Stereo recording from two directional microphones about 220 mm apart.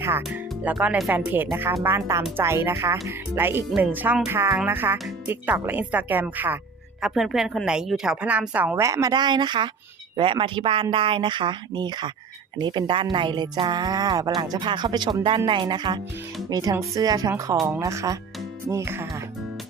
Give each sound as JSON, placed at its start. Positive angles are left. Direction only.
{"t": 0.2, "sound": "a woman's voice", "side_deg": -5}